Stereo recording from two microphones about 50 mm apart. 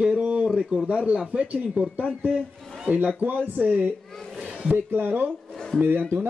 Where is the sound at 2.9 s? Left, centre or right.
Right.